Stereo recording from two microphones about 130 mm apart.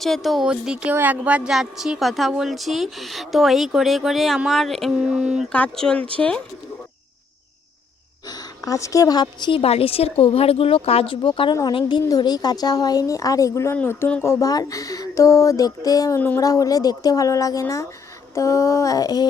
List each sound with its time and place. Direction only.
0.0 s speech: centre (ahead or behind)
5.5 s speech: 10° left (ahead or behind)
8.3 s a woman's voice: 30° left (ahead or behind)
13.7 s speech: 15° left (ahead or behind); by 19.3 s 30° left (ahead or behind)